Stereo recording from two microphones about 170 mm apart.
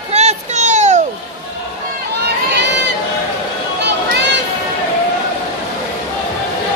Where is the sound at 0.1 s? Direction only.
40° right (ahead or behind).